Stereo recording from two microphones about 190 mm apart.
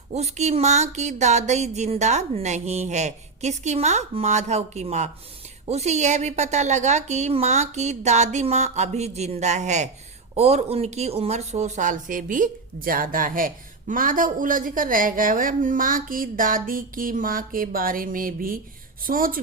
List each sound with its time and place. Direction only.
0.1 s speech: 35° right (ahead or behind)